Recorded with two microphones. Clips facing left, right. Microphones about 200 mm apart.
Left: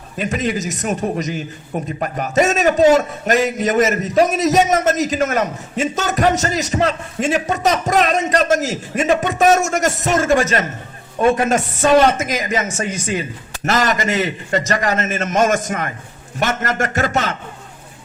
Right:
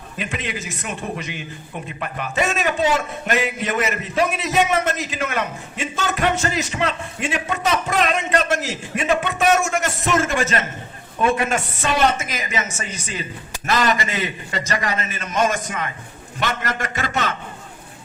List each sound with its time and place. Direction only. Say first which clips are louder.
0.2 s speech: left 8 dB; 40° left (ahead or behind)
12.7 s a man's voice: left 8 dB; 55° left (ahead or behind)